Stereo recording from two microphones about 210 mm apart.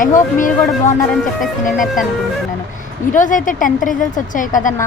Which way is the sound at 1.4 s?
Centre (ahead or behind).